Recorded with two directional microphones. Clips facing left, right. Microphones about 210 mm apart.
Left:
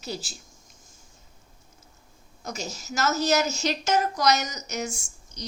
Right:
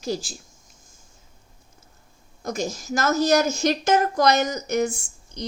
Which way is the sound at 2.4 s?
50° right (ahead or behind).